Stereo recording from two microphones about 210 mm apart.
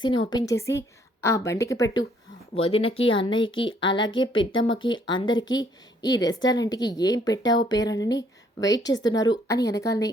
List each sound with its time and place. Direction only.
0.0 s a woman's voice: 20° left (ahead or behind)
4.0 s a woman's voice: 65° left (ahead or behind)
5.0 s a woman's voice: 20° left (ahead or behind)